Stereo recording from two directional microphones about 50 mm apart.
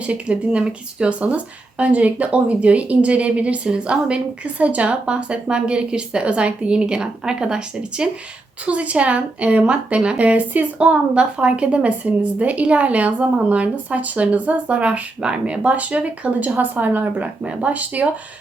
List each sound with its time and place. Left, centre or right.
0.0 s a woman's voice: right
1.8 s a woman's voice: right
17.4 s a woman's voice: right